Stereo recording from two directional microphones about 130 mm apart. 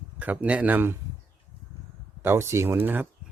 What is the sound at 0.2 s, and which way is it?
Speech, 10° right (ahead or behind).